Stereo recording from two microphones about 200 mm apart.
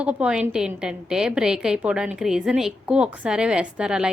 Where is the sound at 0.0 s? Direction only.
5° right (ahead or behind).